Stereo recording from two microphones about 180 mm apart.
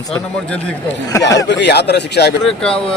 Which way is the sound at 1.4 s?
75° left (ahead or behind).